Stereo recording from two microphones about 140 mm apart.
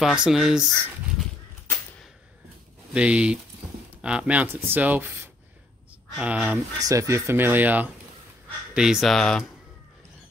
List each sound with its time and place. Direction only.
0.0 s speech: 5° right (ahead or behind)
2.9 s speech: 10° right (ahead or behind)
6.8 s speech: 25° right (ahead or behind); by 9.5 s 5° left (ahead or behind)